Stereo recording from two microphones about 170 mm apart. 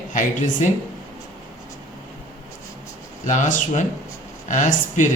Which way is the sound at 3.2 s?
45° left (ahead or behind).